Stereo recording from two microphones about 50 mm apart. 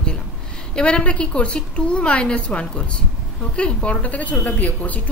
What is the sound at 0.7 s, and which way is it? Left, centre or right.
A woman's voice, centre.